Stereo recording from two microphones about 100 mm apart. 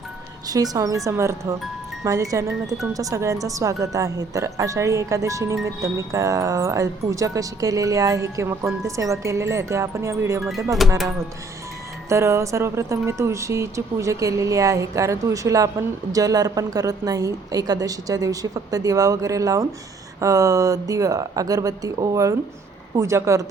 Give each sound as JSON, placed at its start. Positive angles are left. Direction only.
{"t": 0.4, "sound": "speech", "side_deg": -40}
{"t": 2.6, "sound": "speech", "side_deg": 0}
{"t": 2.9, "sound": "speech", "side_deg": -35}
{"t": 10.4, "sound": "speech", "side_deg": -5}
{"t": 12.0, "sound": "speech", "side_deg": -30}